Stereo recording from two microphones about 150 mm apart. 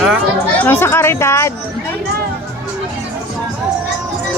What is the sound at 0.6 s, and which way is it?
Speech, 15° left (ahead or behind).